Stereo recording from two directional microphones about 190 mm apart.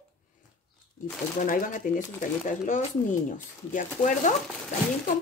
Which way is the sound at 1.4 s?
45° left (ahead or behind).